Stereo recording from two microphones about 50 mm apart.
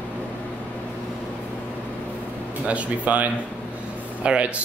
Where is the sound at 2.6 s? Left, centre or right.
Right.